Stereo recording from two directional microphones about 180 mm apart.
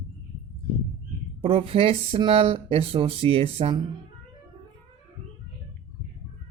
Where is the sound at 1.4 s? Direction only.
30° right (ahead or behind).